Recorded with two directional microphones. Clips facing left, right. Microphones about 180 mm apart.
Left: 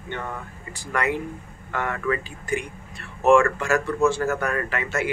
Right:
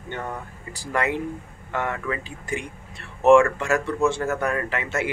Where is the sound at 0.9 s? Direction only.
25° right (ahead or behind).